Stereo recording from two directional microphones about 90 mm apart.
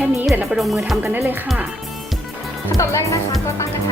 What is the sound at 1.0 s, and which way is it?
Speech, 20° right (ahead or behind).